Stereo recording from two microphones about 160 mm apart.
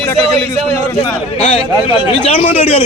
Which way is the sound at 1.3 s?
35° left (ahead or behind).